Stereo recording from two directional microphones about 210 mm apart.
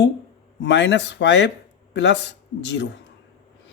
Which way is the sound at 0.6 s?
55° left (ahead or behind).